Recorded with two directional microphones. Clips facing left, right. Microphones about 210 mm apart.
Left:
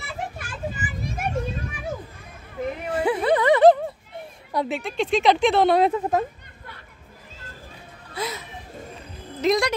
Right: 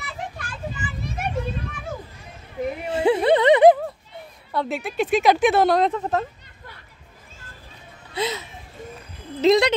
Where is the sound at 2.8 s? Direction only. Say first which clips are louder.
Right 4 dB; 25° right (ahead or behind).